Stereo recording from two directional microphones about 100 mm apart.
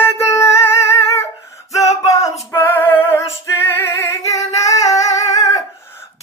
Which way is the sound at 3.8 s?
30° left (ahead or behind).